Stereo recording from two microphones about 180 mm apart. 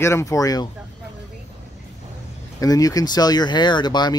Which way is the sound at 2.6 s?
20° left (ahead or behind).